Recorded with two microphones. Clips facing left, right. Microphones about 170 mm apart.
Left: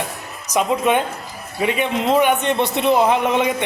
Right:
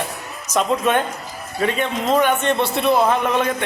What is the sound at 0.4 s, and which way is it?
A man's voice, 10° left (ahead or behind).